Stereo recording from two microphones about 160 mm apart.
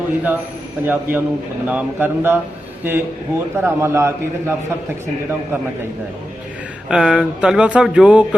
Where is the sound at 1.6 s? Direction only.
10° right (ahead or behind).